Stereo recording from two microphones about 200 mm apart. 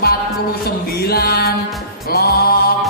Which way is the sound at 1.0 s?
50° left (ahead or behind).